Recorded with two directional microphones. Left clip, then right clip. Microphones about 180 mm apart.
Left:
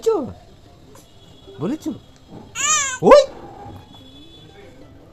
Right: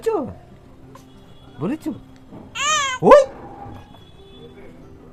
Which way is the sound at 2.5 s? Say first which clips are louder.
Right 1 dB; centre (ahead or behind).